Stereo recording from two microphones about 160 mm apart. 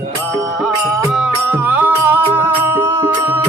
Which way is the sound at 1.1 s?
10° right (ahead or behind).